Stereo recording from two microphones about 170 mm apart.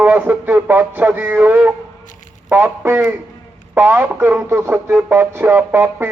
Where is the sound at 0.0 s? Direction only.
10° right (ahead or behind).